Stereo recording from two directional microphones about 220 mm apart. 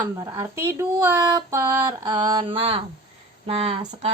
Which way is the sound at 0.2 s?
15° right (ahead or behind).